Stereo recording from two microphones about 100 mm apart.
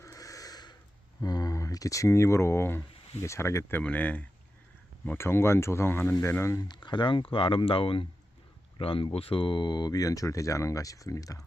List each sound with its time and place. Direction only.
0.0 s a sound: 35° left (ahead or behind)
1.2 s speech: 40° left (ahead or behind)
6.6 s speech: 45° left (ahead or behind)